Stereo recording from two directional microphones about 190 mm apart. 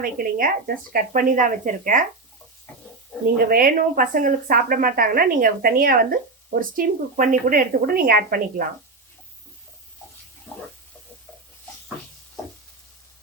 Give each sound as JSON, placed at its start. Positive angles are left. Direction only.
{"t": 0.0, "sound": "speech", "side_deg": -50}
{"t": 3.3, "sound": "speech", "side_deg": -50}